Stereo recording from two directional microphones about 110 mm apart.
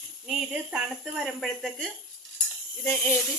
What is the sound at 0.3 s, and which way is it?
Speech, 5° right (ahead or behind).